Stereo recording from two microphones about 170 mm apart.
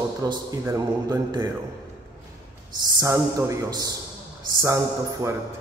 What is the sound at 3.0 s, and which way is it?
Speech, 20° right (ahead or behind).